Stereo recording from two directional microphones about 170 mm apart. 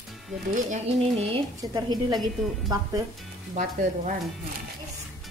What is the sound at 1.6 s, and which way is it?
Speech, 20° right (ahead or behind).